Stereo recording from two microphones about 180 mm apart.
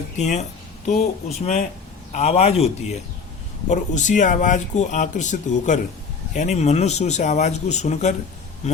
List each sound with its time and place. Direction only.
0.2 s speech: 40° left (ahead or behind)